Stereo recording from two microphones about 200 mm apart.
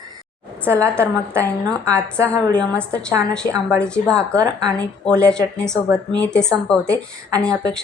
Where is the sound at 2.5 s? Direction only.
5° left (ahead or behind).